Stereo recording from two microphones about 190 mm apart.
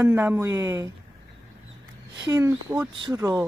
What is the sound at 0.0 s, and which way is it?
Speech, 10° right (ahead or behind).